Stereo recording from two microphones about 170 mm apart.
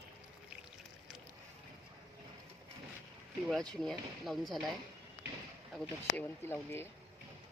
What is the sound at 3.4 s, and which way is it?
Speech, centre (ahead or behind).